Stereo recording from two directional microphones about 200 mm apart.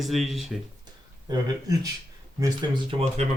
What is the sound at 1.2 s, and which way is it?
Speech, 20° right (ahead or behind).